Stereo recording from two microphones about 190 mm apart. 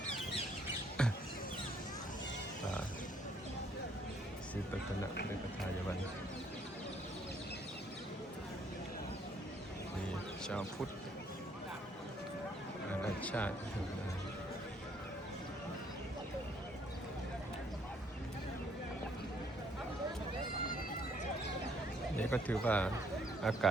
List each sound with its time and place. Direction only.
1.0 s a sound: 5° left (ahead or behind)
10.4 s speech: 5° left (ahead or behind)
12.9 s music: 10° left (ahead or behind)
22.2 s speech: 10° left (ahead or behind)